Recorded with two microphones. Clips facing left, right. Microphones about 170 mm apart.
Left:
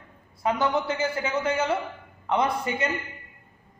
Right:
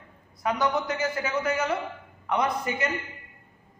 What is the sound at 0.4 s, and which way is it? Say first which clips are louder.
A man's voice: left 1 dB; 25° left (ahead or behind).